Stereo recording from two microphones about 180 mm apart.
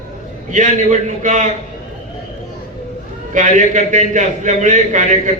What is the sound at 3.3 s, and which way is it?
A man's voice, 45° right (ahead or behind).